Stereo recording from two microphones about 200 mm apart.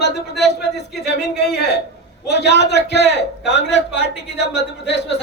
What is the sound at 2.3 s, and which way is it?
A man's voice, 60° left (ahead or behind).